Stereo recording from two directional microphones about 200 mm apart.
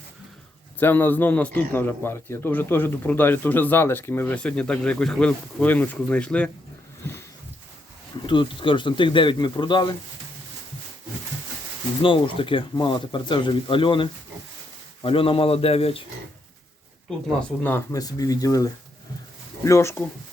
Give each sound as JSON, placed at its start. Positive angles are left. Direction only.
{"t": 0.8, "sound": "a man's voice", "side_deg": 10}
{"t": 8.3, "sound": "speech", "side_deg": 25}
{"t": 12.0, "sound": "speech", "side_deg": 25}
{"t": 17.6, "sound": "a man's voice", "side_deg": 10}